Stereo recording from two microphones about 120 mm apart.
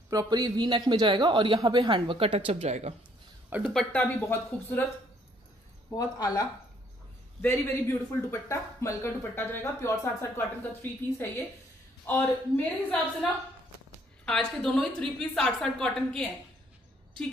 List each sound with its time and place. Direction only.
0.1 s a man's voice: 30° right (ahead or behind); by 2.9 s 60° right (ahead or behind)
3.4 s speech: 15° right (ahead or behind)
4.1 s a woman's voice: 15° left (ahead or behind)
5.9 s speech: 30° left (ahead or behind)
7.4 s a woman's voice: 20° left (ahead or behind)
14.2 s a woman's voice: 5° left (ahead or behind)